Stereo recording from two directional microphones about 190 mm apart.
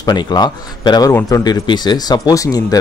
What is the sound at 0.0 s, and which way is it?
A man's voice, 20° left (ahead or behind).